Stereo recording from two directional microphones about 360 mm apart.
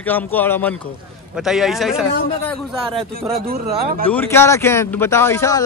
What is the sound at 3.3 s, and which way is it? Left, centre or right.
Speech, right.